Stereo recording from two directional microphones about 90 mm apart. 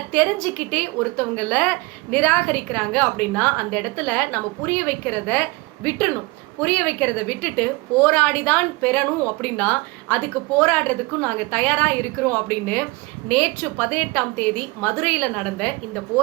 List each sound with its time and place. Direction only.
0.1 s a woman's voice: 15° left (ahead or behind)